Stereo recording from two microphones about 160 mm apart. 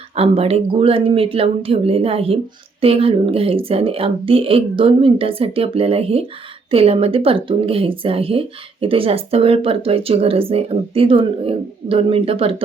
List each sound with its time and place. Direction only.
0.2 s speech: 40° right (ahead or behind)